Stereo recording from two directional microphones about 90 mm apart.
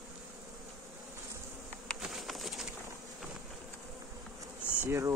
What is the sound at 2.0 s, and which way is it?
Bee, centre (ahead or behind).